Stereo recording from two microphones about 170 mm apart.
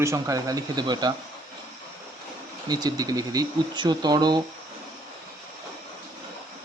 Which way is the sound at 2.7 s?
25° right (ahead or behind).